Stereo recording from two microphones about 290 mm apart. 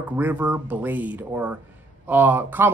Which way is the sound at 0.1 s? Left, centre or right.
Centre.